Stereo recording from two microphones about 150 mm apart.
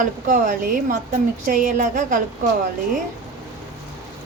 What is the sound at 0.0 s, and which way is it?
A woman's voice, 60° right (ahead or behind).